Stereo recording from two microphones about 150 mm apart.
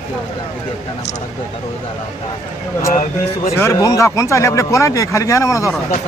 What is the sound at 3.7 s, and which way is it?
Speech, 25° left (ahead or behind).